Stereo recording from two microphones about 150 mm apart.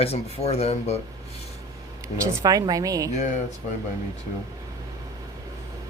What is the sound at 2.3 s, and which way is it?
Speech, 25° right (ahead or behind).